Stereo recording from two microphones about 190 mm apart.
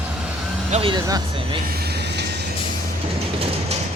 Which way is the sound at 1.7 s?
55° right (ahead or behind).